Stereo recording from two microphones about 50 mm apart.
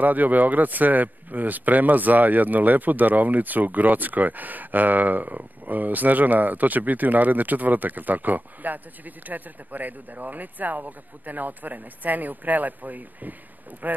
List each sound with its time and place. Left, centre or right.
0.0 s a man's voice: right